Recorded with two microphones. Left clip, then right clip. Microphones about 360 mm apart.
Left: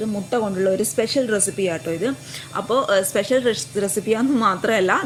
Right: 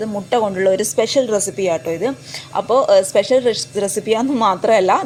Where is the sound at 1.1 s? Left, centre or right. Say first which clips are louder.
Right 4 dB; right.